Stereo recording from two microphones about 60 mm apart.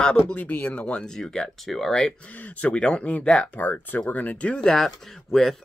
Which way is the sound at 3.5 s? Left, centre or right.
Left.